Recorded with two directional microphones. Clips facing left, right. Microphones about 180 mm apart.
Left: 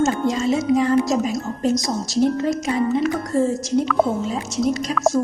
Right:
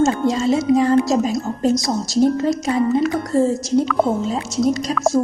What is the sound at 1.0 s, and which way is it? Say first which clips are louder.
Speech: right 3 dB; 30° right (ahead or behind).